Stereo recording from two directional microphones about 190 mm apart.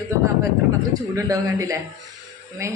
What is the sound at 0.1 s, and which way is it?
A woman's voice, 15° right (ahead or behind).